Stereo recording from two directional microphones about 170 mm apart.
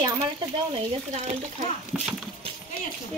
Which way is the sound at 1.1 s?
45° right (ahead or behind).